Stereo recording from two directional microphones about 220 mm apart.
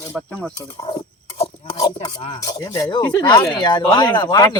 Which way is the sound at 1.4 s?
20° left (ahead or behind).